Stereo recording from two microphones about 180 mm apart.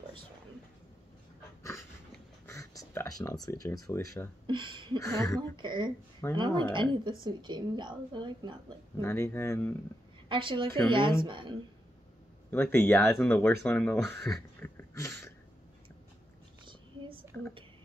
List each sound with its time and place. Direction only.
2.1 s a sound: 15° left (ahead or behind)
4.5 s speech: 25° right (ahead or behind)
4.9 s speech: 15° left (ahead or behind)
5.6 s a woman's voice: 25° right (ahead or behind)
9.0 s speech: 15° left (ahead or behind)
10.2 s a woman's voice: 25° right (ahead or behind)
12.4 s speech: 10° left (ahead or behind)
14.6 s a sound: 15° left (ahead or behind)